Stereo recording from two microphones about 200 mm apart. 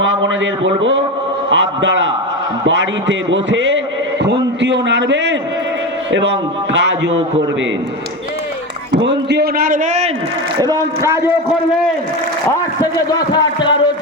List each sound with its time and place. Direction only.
0.6 s a man's voice: 70° right (ahead or behind)
9.0 s a man's voice: 60° right (ahead or behind); by 10.1 s 35° right (ahead or behind)
10.6 s speech: 15° right (ahead or behind)
12.8 s a man's voice: 20° left (ahead or behind)